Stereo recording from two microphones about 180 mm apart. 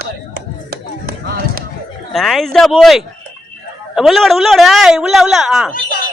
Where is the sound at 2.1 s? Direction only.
Centre (ahead or behind).